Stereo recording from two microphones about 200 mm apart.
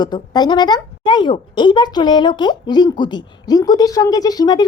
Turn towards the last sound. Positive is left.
turn(degrees=20)  # may be behind; listen again after turning